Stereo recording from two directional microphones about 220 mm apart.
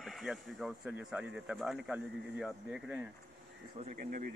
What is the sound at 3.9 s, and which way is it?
Speech, 35° right (ahead or behind).